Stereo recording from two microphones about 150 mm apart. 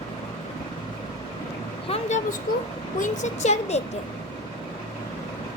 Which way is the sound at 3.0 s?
50° left (ahead or behind).